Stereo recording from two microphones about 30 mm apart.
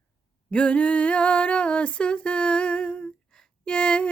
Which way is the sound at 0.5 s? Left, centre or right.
Left.